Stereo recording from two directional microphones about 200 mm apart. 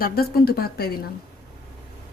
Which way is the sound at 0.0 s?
50° left (ahead or behind).